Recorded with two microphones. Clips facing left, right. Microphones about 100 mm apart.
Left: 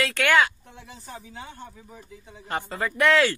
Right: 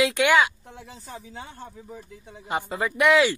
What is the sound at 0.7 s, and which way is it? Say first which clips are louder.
Speech: right 1 dB; 30° right (ahead or behind).